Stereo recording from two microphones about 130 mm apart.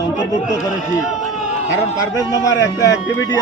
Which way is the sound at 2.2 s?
25° left (ahead or behind).